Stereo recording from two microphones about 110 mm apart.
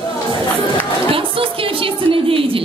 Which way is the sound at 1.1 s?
55° right (ahead or behind).